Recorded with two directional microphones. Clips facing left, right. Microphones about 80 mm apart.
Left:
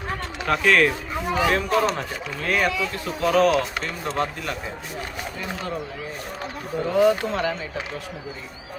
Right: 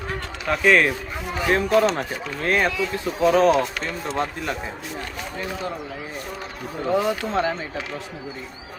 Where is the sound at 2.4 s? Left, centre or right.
Right.